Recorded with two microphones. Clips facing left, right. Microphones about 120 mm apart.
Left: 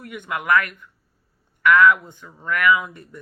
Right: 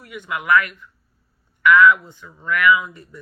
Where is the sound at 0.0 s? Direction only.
50° left (ahead or behind).